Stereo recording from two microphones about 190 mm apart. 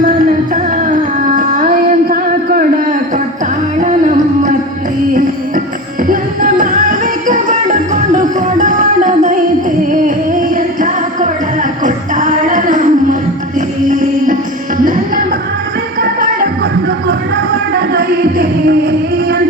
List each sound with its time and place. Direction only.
0.0 s music: 45° right (ahead or behind)
3.8 s music: 40° right (ahead or behind)
6.1 s music: 45° right (ahead or behind)
10.5 s music: 40° right (ahead or behind)
17.7 s music: 50° right (ahead or behind)